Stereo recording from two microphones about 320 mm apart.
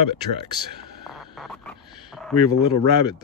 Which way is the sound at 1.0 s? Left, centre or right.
Centre.